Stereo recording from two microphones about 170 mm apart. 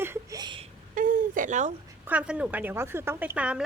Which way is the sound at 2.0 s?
10° right (ahead or behind).